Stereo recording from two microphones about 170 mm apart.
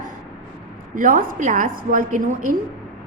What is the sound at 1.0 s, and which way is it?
A woman's voice, 55° right (ahead or behind).